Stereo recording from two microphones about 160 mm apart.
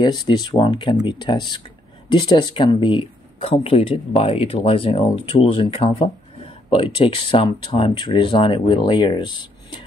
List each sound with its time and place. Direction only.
0.0 s speech: 25° left (ahead or behind)